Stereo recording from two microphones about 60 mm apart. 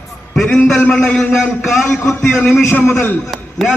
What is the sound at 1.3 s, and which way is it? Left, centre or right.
Speech, centre.